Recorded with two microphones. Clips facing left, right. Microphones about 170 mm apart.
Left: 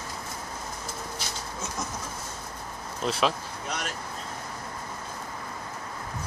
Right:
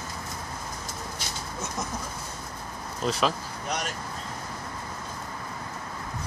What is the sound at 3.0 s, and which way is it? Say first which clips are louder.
Speech: even; centre (ahead or behind).